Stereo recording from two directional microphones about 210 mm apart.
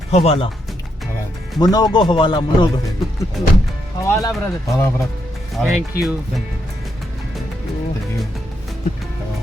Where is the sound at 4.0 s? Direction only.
15° left (ahead or behind).